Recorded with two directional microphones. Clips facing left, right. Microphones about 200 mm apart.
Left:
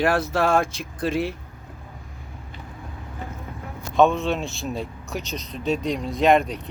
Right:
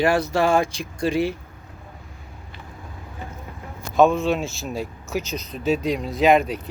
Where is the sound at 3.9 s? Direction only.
Centre (ahead or behind).